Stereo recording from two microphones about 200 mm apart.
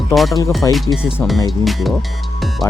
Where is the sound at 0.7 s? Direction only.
Centre (ahead or behind).